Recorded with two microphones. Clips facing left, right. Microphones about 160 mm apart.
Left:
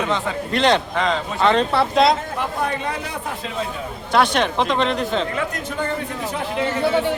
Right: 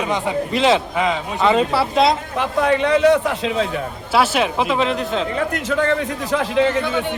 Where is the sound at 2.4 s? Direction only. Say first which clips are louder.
Right 6 dB; 90° right.